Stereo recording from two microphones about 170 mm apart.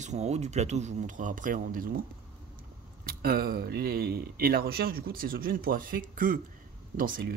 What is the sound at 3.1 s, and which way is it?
Speech, 60° right (ahead or behind).